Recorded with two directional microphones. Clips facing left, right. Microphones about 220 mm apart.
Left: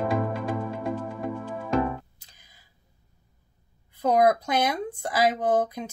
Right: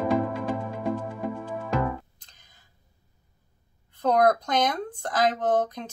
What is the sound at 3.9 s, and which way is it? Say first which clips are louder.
Speech: even; 10° left (ahead or behind).